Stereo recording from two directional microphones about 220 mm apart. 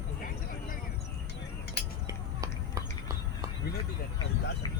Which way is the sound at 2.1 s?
15° right (ahead or behind).